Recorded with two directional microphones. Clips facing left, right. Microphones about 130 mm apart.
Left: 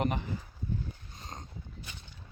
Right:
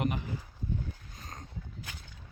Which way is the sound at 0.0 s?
35° left (ahead or behind).